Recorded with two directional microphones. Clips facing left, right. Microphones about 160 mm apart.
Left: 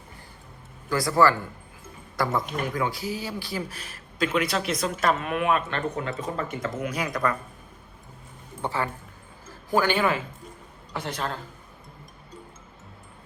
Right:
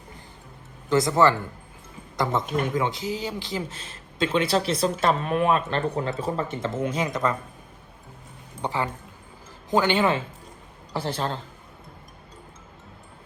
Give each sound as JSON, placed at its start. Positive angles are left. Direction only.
{"t": 0.9, "sound": "speech", "side_deg": -20}
{"t": 8.6, "sound": "speech", "side_deg": -15}